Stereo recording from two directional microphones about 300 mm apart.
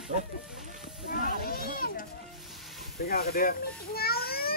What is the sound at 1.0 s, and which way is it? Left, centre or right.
Children playing, left.